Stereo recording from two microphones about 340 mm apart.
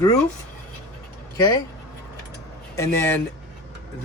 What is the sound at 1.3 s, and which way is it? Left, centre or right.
Speech, centre.